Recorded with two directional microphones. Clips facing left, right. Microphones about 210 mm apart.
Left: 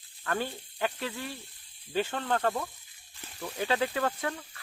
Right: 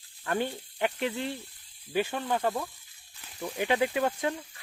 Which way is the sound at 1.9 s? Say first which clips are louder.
Right 1 dB; 10° right (ahead or behind).